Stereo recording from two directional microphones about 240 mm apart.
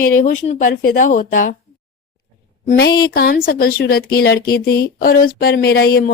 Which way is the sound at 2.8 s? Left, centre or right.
Left.